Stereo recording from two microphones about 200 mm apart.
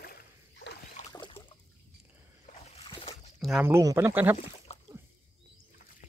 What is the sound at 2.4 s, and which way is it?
Boat, 30° left (ahead or behind).